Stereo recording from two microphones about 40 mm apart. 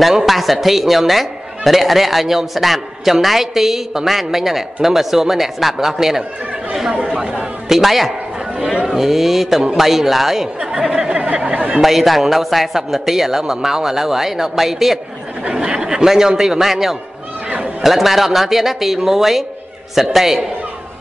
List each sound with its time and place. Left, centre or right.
0.1 s a man's voice: centre
7.6 s a man's voice: centre
10.6 s speech: centre
11.8 s a man's voice: centre
15.5 s a man's voice: centre